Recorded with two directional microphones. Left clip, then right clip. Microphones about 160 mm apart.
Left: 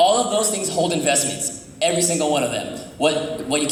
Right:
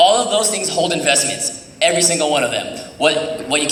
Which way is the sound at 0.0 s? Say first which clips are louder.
Right 4 dB; 30° left (ahead or behind).